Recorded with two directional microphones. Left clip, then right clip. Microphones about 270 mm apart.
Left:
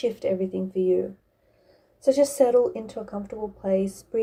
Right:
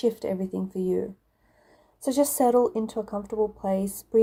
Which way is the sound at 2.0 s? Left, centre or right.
Right.